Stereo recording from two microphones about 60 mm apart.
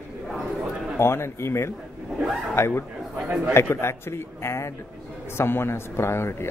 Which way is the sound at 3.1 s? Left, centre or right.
Right.